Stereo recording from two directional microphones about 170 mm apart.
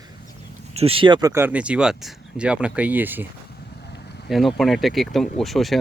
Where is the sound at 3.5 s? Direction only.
75° left (ahead or behind).